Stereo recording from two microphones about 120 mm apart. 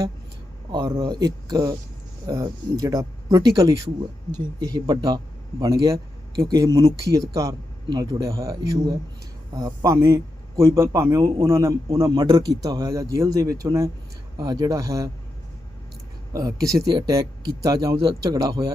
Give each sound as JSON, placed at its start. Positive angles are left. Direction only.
{"t": 0.7, "sound": "a man's voice", "side_deg": -35}
{"t": 12.2, "sound": "a man's voice", "side_deg": -35}
{"t": 16.3, "sound": "a man's voice", "side_deg": -30}
{"t": 17.9, "sound": "a man's voice", "side_deg": -50}
{"t": 18.2, "sound": "a man's voice", "side_deg": -30}